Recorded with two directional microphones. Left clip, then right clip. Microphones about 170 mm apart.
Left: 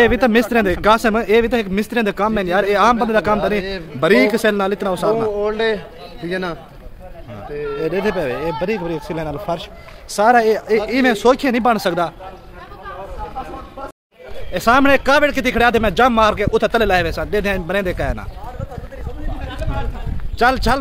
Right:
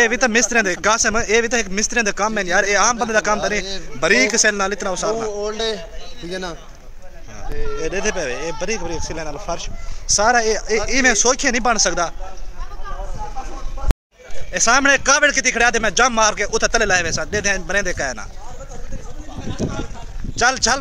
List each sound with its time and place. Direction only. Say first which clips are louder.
0.0 s speech: left 2 dB; centre (ahead or behind)
6.2 s a man's voice: left 5 dB; 25° right (ahead or behind)
7.8 s speech: left 2 dB; centre (ahead or behind)
14.5 s speech: left 1 dB; centre (ahead or behind)
20.3 s speech: left 2 dB; centre (ahead or behind)